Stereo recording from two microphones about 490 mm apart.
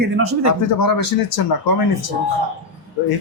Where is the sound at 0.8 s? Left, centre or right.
Left.